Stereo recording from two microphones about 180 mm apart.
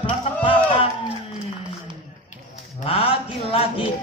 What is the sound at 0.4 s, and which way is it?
Music, 30° left (ahead or behind).